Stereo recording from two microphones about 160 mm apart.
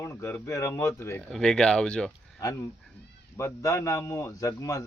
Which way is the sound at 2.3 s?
20° left (ahead or behind).